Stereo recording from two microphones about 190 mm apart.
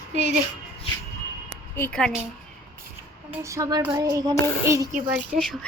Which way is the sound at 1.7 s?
5° left (ahead or behind).